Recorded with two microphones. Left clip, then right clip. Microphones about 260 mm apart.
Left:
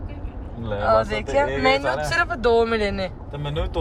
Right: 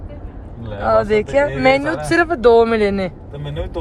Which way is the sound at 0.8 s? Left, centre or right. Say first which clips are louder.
Right 5 dB; right.